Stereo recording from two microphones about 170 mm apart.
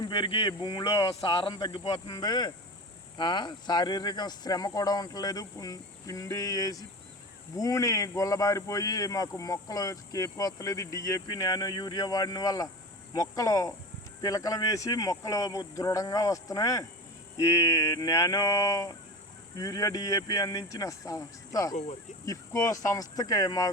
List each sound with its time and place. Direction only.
0.0 s speech: 30° left (ahead or behind)